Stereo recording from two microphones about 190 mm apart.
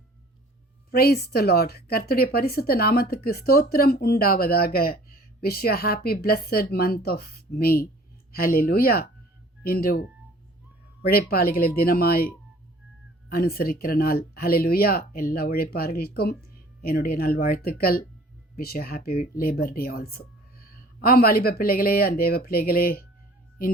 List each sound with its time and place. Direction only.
0.9 s a woman's voice: 55° left (ahead or behind)
11.1 s a woman's voice: 50° left (ahead or behind)
13.3 s a woman's voice: 50° left (ahead or behind)